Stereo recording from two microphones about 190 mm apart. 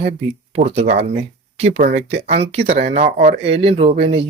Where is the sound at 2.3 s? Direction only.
30° right (ahead or behind).